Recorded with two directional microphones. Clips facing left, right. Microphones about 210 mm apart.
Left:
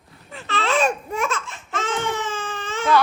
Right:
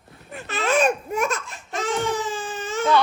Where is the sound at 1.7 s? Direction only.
15° right (ahead or behind).